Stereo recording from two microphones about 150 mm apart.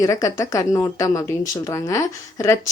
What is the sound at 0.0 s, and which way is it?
A woman's voice, 20° left (ahead or behind).